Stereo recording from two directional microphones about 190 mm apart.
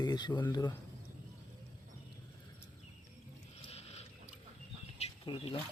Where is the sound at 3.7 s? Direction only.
35° left (ahead or behind).